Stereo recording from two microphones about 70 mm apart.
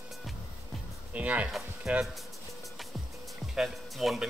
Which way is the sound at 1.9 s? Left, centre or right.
Centre.